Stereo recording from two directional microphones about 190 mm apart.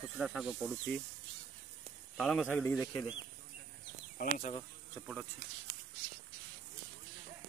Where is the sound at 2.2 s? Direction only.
Centre (ahead or behind).